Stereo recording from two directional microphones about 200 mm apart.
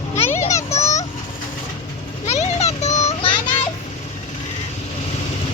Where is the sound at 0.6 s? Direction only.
35° left (ahead or behind).